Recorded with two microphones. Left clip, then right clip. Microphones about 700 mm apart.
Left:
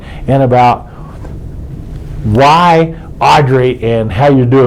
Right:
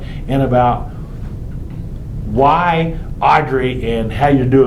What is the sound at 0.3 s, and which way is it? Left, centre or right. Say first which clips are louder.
Speech: left 6 dB; left.